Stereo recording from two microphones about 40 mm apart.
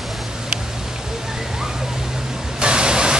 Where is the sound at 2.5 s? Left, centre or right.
Right.